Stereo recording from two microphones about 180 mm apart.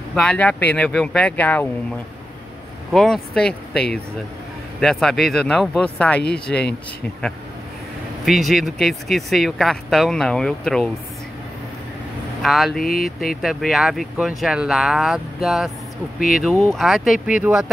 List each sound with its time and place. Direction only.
0.1 s speech: 5° left (ahead or behind)
2.9 s speech: centre (ahead or behind)
8.3 s speech: centre (ahead or behind)
12.4 s speech: centre (ahead or behind)
16.2 s speech: 50° left (ahead or behind)
16.4 s speech: centre (ahead or behind)